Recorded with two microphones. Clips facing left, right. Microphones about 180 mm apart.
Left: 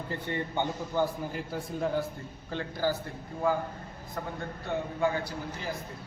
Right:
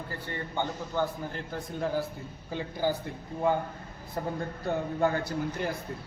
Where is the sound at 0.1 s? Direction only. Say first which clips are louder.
Left 6 dB; 20° left (ahead or behind); by 2.0 s centre (ahead or behind).